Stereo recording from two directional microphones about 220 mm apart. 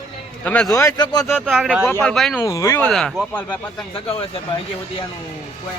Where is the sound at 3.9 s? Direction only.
25° left (ahead or behind).